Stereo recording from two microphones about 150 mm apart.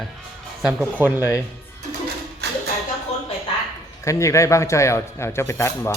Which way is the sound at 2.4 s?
90° right.